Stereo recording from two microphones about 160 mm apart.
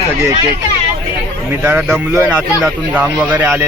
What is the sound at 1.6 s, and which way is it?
A man's voice, 15° right (ahead or behind).